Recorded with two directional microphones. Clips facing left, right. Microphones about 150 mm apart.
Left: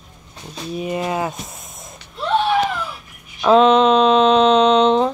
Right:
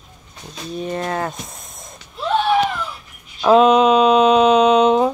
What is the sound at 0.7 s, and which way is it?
Speech, 10° left (ahead or behind).